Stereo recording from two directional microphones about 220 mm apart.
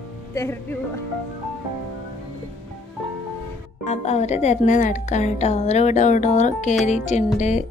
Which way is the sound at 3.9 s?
30° left (ahead or behind).